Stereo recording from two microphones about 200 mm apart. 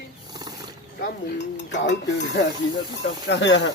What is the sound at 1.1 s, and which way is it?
Dishes, 60° left (ahead or behind).